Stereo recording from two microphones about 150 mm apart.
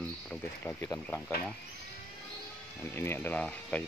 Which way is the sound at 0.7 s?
15° left (ahead or behind).